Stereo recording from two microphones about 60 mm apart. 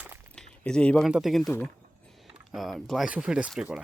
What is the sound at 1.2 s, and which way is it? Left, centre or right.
Speech, centre.